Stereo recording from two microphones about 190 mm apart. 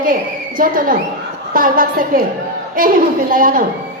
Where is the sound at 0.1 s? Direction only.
45° right (ahead or behind).